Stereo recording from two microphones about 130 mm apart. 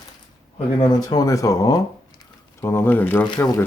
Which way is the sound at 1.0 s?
30° left (ahead or behind).